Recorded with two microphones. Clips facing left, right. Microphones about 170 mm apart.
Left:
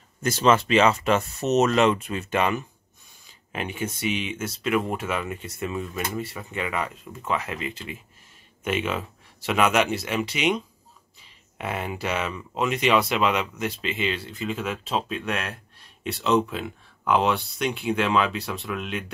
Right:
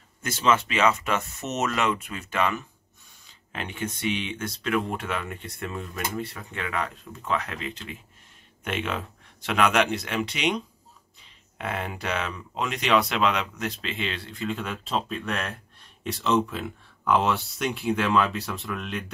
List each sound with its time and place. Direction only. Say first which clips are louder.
0.2 s speech: left 4 dB; 35° left (ahead or behind); by 2.6 s 20° left (ahead or behind)
3.5 s speech: left 3 dB; 10° left (ahead or behind)